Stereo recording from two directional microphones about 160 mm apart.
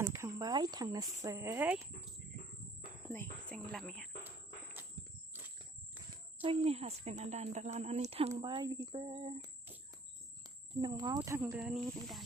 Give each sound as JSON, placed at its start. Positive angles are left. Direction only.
{"t": 0.0, "sound": "speech", "side_deg": -15}
{"t": 3.5, "sound": "speech", "side_deg": 0}
{"t": 6.4, "sound": "a woman's voice", "side_deg": -35}
{"t": 8.4, "sound": "speech", "side_deg": -30}
{"t": 10.8, "sound": "speech", "side_deg": -25}
{"t": 11.5, "sound": "speech", "side_deg": -5}